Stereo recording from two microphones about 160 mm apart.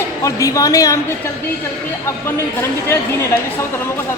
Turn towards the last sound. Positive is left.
turn(degrees=15)  # may be behind; listen again after turning